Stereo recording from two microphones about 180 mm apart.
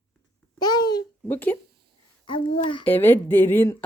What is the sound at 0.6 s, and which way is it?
Babbling, 20° left (ahead or behind).